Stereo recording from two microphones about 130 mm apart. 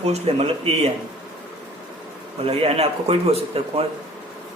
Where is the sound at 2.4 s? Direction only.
50° right (ahead or behind).